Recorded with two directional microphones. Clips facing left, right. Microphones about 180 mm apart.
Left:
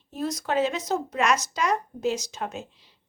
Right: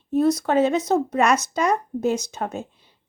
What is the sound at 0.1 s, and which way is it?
Speech, 60° right (ahead or behind).